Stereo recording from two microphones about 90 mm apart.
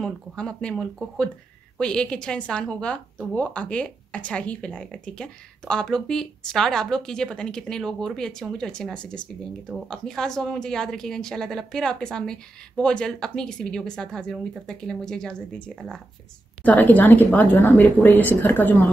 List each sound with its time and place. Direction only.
0.0 s a woman's voice: 10° left (ahead or behind)
16.6 s a woman's voice: 15° left (ahead or behind)